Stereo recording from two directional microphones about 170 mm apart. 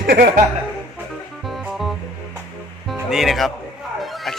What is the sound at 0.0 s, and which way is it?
Speech, 65° right (ahead or behind).